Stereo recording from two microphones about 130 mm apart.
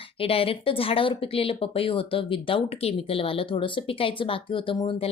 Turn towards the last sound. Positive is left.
turn(degrees=45)  # may be behind; listen again after turning